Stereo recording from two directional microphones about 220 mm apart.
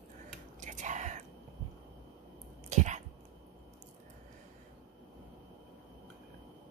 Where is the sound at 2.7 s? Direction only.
30° right (ahead or behind).